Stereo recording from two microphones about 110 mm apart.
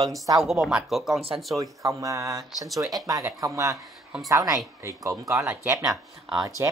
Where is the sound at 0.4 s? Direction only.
Centre (ahead or behind).